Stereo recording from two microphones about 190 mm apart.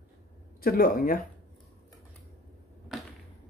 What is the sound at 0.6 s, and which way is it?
Speech, 50° left (ahead or behind).